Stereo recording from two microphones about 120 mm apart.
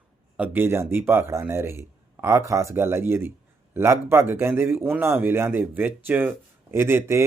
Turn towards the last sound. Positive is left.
turn(degrees=-20)  # may be behind; listen again after turning